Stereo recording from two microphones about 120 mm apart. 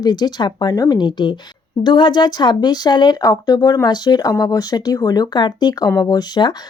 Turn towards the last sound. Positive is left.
turn(degrees=35)  # may be behind; listen again after turning